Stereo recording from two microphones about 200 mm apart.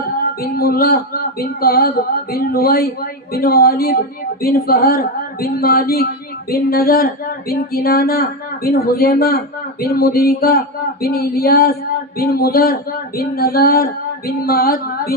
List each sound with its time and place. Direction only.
0.5 s speech: 50° left (ahead or behind)